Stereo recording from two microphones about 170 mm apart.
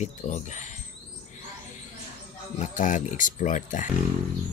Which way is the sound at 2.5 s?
50° left (ahead or behind).